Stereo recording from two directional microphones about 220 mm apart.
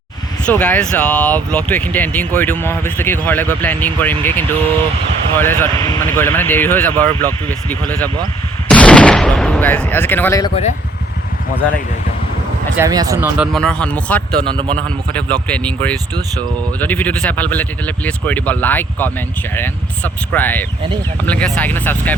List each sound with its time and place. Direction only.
0.4 s speech: 5° left (ahead or behind)
8.6 s gunshot: 5° left (ahead or behind)
12.7 s speech: 15° right (ahead or behind); by 14.2 s 5° left (ahead or behind)
14.4 s speech: 20° right (ahead or behind)
14.8 s speech: 5° left (ahead or behind)
20.3 s speech: 10° left (ahead or behind)